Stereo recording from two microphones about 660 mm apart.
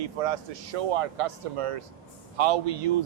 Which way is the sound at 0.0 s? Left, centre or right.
Right.